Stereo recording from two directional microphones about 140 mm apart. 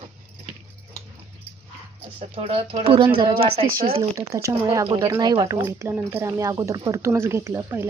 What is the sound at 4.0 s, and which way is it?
Speech, 25° right (ahead or behind).